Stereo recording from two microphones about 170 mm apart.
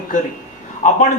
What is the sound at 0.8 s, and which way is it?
Speech, 45° left (ahead or behind).